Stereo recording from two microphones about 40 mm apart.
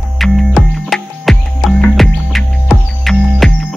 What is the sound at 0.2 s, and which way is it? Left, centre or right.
Music, centre.